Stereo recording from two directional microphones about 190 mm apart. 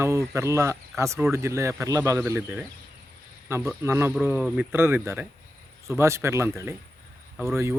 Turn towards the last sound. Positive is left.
turn(degrees=-15)  # may be behind; listen again after turning